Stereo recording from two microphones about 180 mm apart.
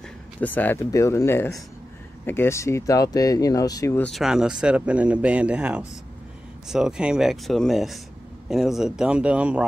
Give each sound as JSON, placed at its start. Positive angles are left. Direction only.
{"t": 0.4, "sound": "speech", "side_deg": 10}
{"t": 4.1, "sound": "speech", "side_deg": -5}